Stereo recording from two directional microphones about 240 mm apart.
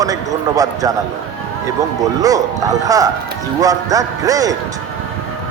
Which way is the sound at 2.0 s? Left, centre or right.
Centre.